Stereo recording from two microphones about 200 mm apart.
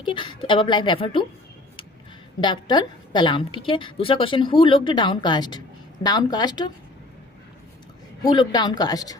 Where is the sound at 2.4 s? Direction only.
20° left (ahead or behind).